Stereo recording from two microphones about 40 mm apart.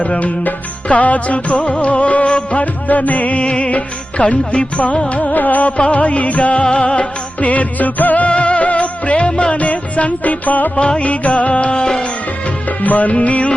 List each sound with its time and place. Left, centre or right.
0.0 s music: left
10.8 s music: left
12.8 s music: left